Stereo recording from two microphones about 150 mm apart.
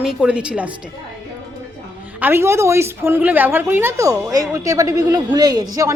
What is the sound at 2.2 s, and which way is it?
A woman's voice, 15° right (ahead or behind).